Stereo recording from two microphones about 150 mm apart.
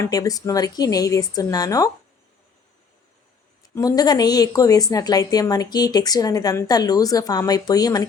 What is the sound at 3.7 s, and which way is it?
A woman's voice, 25° left (ahead or behind).